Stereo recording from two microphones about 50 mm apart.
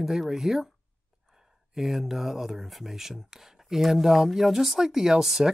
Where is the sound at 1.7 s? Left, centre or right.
Centre.